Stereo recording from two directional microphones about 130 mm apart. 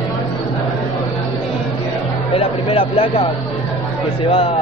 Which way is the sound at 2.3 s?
45° left (ahead or behind).